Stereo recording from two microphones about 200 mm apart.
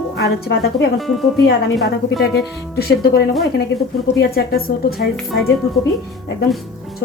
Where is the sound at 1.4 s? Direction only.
55° left (ahead or behind).